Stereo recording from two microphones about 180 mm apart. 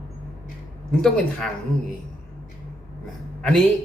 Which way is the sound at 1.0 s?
5° left (ahead or behind).